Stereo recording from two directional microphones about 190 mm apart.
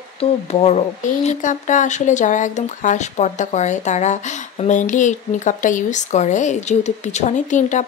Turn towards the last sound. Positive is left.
turn(degrees=40)  # may be behind; listen again after turning